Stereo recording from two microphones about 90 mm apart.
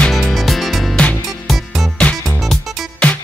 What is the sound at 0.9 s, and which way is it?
Music, 15° left (ahead or behind).